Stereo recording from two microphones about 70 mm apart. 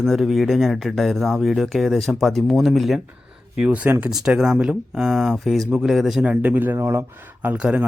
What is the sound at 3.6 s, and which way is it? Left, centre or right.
Speech, centre.